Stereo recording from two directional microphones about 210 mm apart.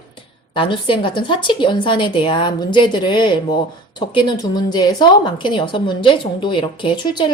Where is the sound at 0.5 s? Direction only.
25° left (ahead or behind).